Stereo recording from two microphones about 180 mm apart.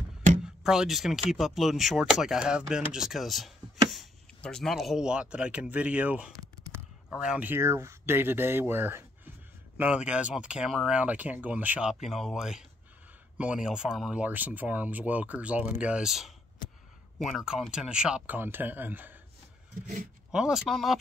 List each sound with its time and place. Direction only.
0.4 s speech: 5° right (ahead or behind)
6.4 s a sound: 20° right (ahead or behind)
7.1 s speech: 5° right (ahead or behind)
20.2 s speech: 5° right (ahead or behind)